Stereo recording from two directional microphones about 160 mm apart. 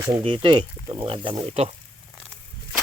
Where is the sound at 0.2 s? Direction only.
30° right (ahead or behind).